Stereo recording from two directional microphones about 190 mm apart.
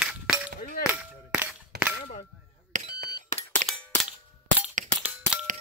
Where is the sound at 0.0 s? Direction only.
5° right (ahead or behind).